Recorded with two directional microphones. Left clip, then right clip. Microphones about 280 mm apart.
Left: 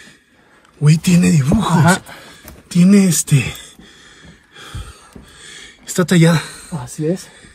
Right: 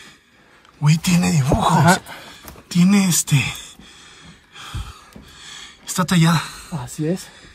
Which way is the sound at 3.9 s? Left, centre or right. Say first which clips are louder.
Left 1 dB; right.